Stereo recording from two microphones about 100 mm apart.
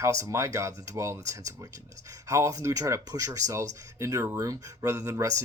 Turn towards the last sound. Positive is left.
turn(degrees=-30)  # may be behind; listen again after turning